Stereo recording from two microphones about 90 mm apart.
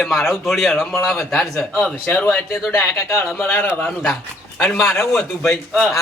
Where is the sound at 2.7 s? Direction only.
30° left (ahead or behind).